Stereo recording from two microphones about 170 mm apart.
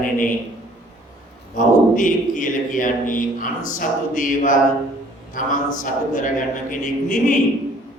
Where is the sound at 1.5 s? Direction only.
50° left (ahead or behind).